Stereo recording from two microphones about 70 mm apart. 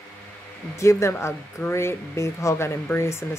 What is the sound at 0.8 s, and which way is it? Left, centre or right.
Speech, left.